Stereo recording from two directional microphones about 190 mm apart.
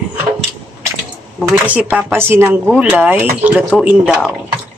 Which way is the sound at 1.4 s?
10° right (ahead or behind).